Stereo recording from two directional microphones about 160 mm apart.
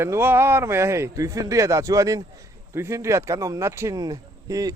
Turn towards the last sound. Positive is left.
turn(degrees=-20)  # may be behind; listen again after turning